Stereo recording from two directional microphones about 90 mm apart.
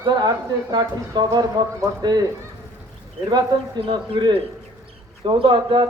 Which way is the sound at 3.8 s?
80° right.